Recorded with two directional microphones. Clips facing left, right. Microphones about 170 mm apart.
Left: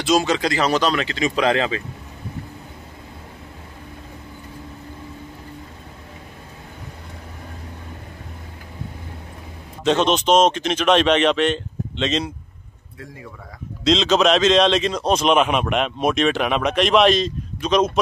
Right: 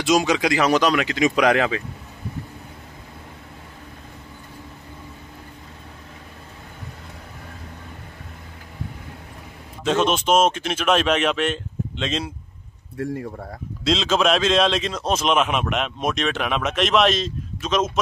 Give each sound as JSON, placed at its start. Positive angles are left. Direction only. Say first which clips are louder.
{"t": 0.2, "sound": "speech", "louder": "right 1 dB", "side_deg": -15}
{"t": 9.8, "sound": "a man's voice", "louder": "left 2 dB", "side_deg": -5}
{"t": 12.9, "sound": "speech", "louder": "right 11 dB", "side_deg": -60}
{"t": 13.8, "sound": "a man's voice", "louder": "left 3 dB", "side_deg": -5}